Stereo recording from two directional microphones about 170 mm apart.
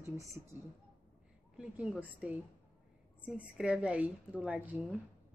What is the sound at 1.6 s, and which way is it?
A woman's voice, 5° right (ahead or behind).